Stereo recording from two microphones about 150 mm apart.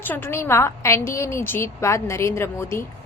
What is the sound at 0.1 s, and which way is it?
A woman's voice, 15° left (ahead or behind).